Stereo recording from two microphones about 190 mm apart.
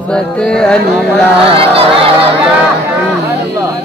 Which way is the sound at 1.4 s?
30° right (ahead or behind).